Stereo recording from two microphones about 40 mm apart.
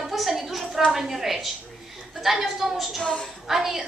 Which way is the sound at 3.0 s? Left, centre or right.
Left.